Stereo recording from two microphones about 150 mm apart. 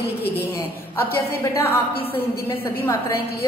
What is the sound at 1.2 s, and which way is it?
A woman's voice, 20° left (ahead or behind).